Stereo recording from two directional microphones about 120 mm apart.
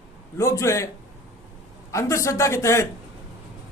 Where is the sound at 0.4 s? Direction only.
25° left (ahead or behind).